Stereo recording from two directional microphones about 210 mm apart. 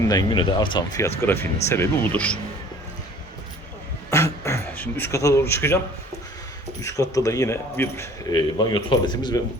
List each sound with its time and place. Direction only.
0.0 s speech: 20° left (ahead or behind)
4.1 s a sound: 15° left (ahead or behind)
6.8 s speech: 15° left (ahead or behind)